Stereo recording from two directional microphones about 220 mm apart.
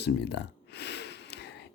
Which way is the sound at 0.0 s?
50° left (ahead or behind).